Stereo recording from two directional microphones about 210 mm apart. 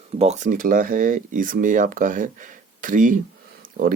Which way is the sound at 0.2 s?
35° right (ahead or behind).